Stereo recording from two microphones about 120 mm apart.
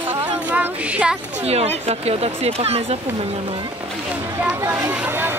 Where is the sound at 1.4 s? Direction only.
60° right (ahead or behind).